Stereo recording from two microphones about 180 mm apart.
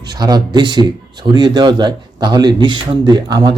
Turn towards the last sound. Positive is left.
turn(degrees=-25)  # may be behind; listen again after turning